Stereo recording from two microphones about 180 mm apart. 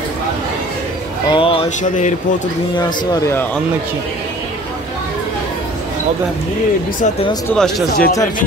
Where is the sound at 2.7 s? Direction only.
25° left (ahead or behind).